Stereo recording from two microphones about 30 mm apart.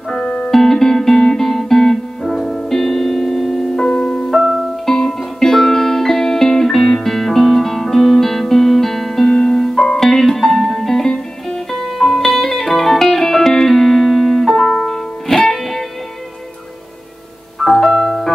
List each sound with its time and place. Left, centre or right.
0.1 s music: left
0.5 s music: centre
4.0 s music: left
4.3 s music: centre
4.8 s music: centre
17.6 s music: centre